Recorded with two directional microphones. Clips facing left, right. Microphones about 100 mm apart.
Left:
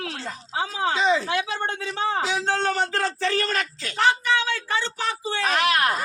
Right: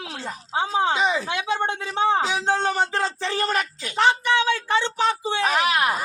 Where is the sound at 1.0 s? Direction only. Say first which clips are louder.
Left 1 dB; 10° right (ahead or behind).